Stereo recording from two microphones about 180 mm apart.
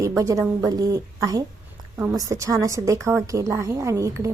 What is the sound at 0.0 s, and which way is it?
A woman's voice, 15° right (ahead or behind).